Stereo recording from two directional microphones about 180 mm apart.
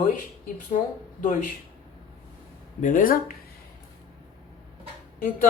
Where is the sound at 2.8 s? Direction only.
45° left (ahead or behind).